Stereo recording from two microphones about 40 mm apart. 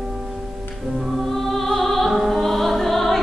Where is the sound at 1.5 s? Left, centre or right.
Centre.